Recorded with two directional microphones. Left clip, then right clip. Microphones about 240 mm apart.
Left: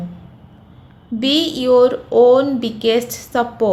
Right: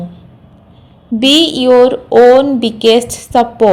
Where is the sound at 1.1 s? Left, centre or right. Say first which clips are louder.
Right 8 dB; right.